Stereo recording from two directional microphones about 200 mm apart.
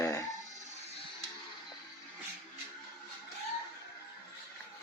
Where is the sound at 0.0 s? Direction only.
15° left (ahead or behind).